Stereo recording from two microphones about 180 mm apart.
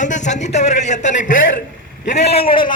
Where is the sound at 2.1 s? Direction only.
65° left (ahead or behind).